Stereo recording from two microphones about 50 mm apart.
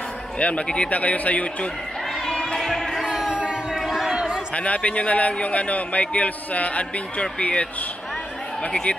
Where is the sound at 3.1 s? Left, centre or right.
Centre.